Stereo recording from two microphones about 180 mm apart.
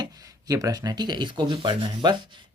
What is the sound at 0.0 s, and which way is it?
Speech, 20° right (ahead or behind).